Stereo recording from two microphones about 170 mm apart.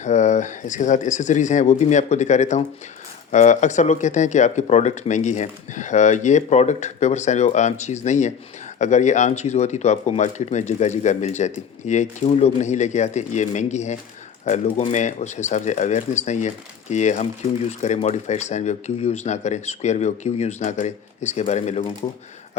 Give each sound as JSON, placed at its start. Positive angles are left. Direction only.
{"t": 0.0, "sound": "speech", "side_deg": 45}